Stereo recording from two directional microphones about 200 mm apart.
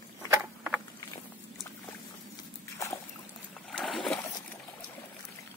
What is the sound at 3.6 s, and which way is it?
Splash, centre (ahead or behind).